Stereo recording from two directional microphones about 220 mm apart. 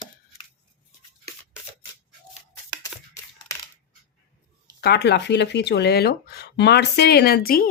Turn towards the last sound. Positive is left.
turn(degrees=40)  # may be behind; listen again after turning